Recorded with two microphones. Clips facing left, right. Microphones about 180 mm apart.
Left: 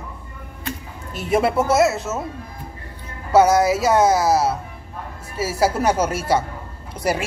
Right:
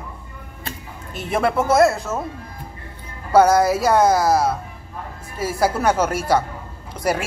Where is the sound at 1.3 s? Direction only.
10° left (ahead or behind).